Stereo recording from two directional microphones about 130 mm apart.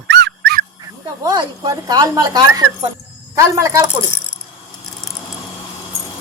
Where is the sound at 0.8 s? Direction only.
30° right (ahead or behind).